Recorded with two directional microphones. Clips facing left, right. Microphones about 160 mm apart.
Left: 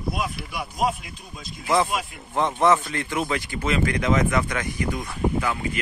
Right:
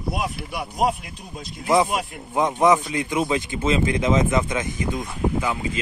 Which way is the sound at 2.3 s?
15° right (ahead or behind).